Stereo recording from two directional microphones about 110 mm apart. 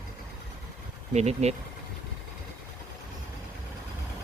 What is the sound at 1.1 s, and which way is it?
Speech, 85° right.